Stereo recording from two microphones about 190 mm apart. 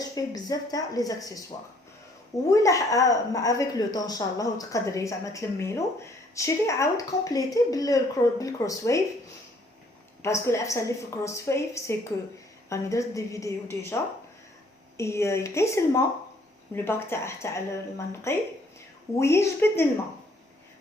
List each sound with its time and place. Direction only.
0.0 s a woman's voice: 20° left (ahead or behind)
2.5 s a woman's voice: 15° left (ahead or behind)
10.2 s a woman's voice: 15° left (ahead or behind)